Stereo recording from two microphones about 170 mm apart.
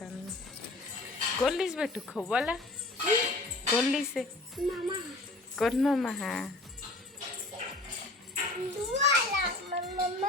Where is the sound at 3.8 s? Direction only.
Centre (ahead or behind).